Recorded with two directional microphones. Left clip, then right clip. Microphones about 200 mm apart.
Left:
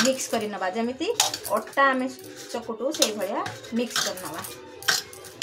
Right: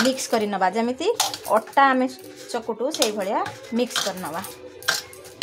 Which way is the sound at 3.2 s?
55° right (ahead or behind).